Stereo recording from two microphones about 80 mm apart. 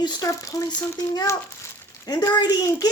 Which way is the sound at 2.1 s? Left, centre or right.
Left.